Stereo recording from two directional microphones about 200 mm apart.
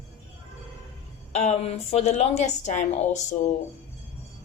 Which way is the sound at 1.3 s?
35° left (ahead or behind).